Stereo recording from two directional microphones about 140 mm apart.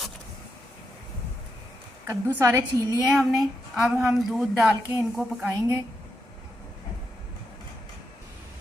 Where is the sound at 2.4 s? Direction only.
20° right (ahead or behind).